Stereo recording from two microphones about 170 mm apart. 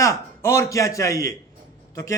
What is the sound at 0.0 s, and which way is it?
A man's voice, 15° left (ahead or behind).